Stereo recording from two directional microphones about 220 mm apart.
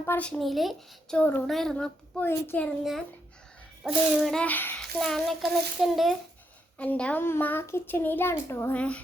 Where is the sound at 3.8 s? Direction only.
Centre (ahead or behind).